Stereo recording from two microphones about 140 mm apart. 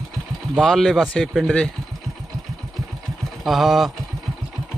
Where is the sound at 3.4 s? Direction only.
Centre (ahead or behind).